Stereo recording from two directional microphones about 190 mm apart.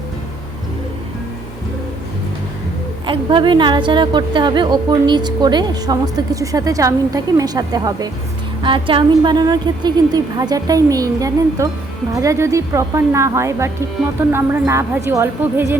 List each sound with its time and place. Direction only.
3.1 s a woman's voice: 25° right (ahead or behind)